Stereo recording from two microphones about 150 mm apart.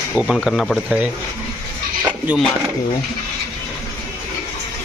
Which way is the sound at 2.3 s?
10° right (ahead or behind).